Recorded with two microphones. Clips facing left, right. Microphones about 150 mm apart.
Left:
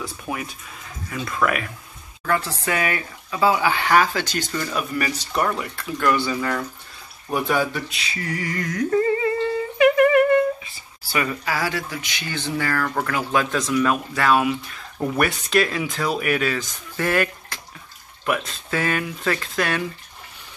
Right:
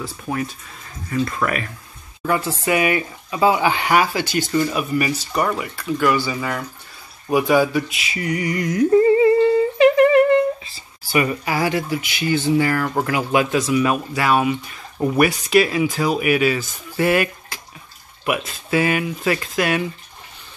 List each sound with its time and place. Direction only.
0.0 s speech: 5° left (ahead or behind)
2.2 s speech: 15° right (ahead or behind)
9.8 s humming: 25° right (ahead or behind)
11.1 s speech: 15° right (ahead or behind)
12.0 s speech: 5° right (ahead or behind)